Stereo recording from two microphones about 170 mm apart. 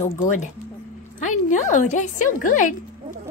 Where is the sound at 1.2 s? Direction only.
45° left (ahead or behind).